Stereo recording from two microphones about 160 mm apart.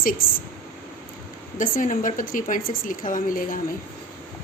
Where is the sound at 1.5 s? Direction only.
55° left (ahead or behind).